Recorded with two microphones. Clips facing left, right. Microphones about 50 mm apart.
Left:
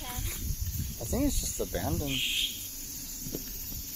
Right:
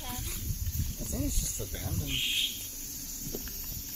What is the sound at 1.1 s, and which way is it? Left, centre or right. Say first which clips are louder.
Speech: left 7 dB; left.